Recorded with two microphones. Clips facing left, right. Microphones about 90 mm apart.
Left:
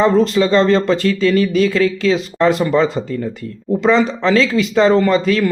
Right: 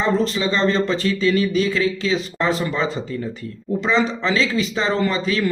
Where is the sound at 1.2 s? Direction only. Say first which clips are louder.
Left 3 dB; 45° left (ahead or behind).